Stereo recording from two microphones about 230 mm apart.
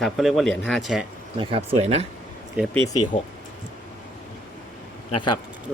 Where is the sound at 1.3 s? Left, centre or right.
Right.